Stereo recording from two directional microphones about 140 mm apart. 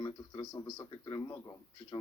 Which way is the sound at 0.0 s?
25° left (ahead or behind).